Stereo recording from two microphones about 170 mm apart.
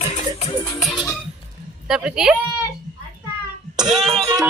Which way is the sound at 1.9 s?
5° right (ahead or behind).